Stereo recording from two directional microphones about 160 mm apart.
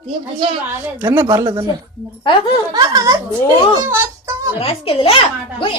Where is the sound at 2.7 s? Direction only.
25° right (ahead or behind).